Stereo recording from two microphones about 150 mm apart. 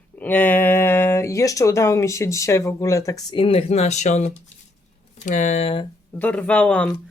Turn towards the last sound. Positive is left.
turn(degrees=10)  # may be behind; listen again after turning